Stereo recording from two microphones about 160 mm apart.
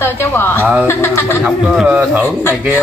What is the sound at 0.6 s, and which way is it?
Speech, 10° right (ahead or behind).